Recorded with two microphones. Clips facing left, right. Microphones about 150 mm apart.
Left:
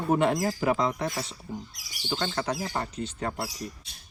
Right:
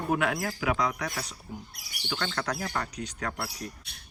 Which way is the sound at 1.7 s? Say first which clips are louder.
Left 2 dB; 60° right (ahead or behind).